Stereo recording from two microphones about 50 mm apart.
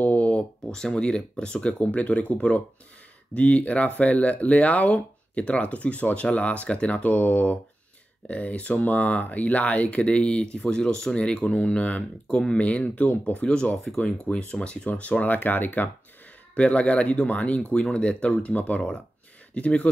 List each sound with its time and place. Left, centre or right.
0.0 s a sound: left
0.7 s speech: centre; by 15.9 s left
16.5 s speech: left